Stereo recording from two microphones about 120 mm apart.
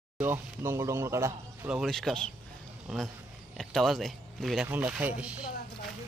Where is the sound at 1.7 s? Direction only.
Centre (ahead or behind).